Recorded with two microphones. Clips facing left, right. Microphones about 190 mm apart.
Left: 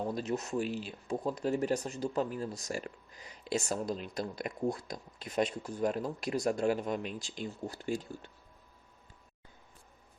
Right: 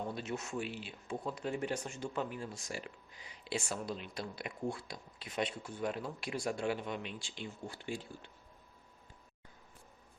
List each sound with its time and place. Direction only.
0.1 s speech: 40° left (ahead or behind)